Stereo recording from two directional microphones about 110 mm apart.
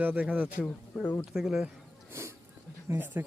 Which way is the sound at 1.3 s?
5° right (ahead or behind).